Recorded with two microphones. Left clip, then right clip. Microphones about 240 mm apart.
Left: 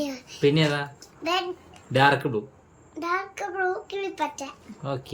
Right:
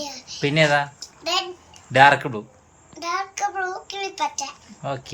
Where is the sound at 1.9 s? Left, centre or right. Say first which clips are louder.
Right 6 dB; centre.